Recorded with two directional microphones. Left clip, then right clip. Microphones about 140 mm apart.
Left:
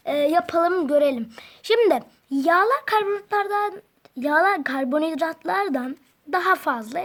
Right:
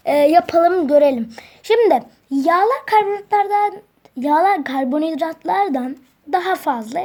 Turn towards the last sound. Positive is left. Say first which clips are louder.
# right 4 dB
turn(degrees=30)  # may be behind; listen again after turning